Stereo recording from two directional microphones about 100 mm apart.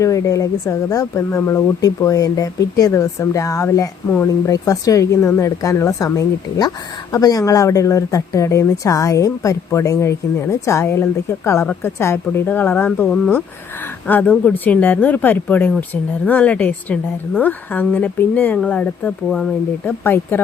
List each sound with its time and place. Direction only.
0.0 s speech: 30° left (ahead or behind)
14.1 s speech: 15° left (ahead or behind)
19.8 s speech: 25° left (ahead or behind)